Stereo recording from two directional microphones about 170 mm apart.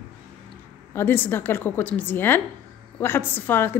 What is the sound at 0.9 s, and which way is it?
A woman's voice, 10° left (ahead or behind).